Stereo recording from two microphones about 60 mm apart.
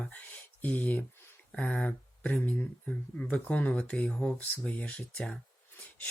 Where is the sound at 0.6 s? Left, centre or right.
Left.